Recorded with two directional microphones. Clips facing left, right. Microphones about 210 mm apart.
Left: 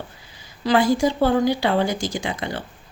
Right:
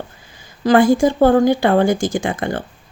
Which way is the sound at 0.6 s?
50° right (ahead or behind).